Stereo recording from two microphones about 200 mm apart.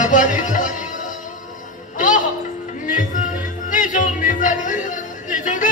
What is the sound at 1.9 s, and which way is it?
Music, 40° left (ahead or behind).